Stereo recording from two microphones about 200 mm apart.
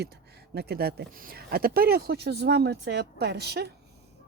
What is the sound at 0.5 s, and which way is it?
Speech, 55° right (ahead or behind).